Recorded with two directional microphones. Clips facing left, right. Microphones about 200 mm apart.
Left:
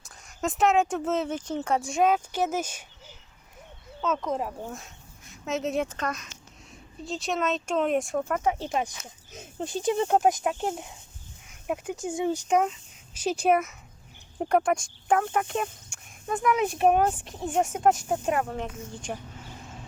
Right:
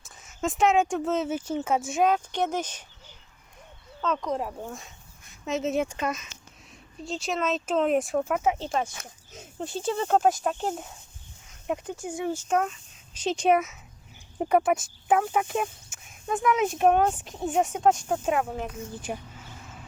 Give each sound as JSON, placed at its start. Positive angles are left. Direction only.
{"t": 0.0, "sound": "speech", "side_deg": 0}
{"t": 4.0, "sound": "speech", "side_deg": 5}
{"t": 8.5, "sound": "speech", "side_deg": 10}
{"t": 11.9, "sound": "speech", "side_deg": 20}